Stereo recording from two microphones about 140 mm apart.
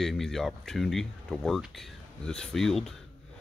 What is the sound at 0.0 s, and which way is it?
Speech, centre (ahead or behind).